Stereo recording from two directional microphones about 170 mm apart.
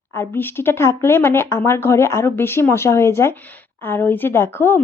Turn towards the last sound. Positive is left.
turn(degrees=15)  # may be behind; listen again after turning